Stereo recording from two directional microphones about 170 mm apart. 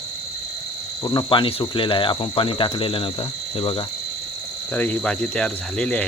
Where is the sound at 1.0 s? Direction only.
25° left (ahead or behind).